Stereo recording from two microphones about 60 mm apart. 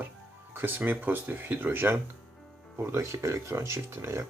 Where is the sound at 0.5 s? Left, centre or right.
Right.